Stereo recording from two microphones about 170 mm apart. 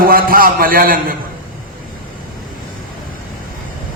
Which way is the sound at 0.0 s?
60° right (ahead or behind).